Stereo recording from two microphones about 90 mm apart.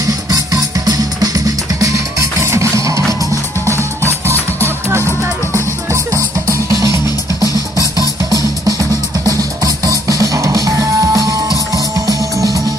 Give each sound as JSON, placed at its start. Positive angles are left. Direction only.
{"t": 0.1, "sound": "music", "side_deg": -45}